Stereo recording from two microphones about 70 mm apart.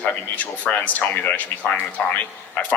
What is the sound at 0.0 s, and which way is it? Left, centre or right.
Speech, left.